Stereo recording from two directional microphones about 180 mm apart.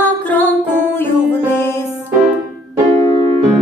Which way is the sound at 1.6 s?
15° left (ahead or behind).